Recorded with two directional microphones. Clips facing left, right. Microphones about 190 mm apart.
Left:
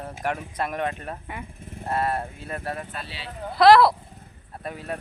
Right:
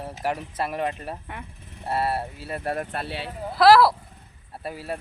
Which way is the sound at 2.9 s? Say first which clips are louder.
Right 6 dB; 60° right (ahead or behind).